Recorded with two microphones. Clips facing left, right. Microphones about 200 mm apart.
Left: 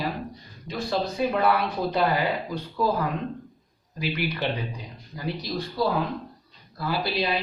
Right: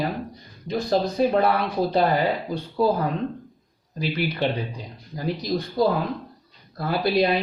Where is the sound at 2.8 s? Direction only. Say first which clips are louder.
Right 4 dB; 30° right (ahead or behind).